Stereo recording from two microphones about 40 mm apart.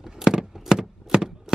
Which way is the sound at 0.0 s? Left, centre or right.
Centre.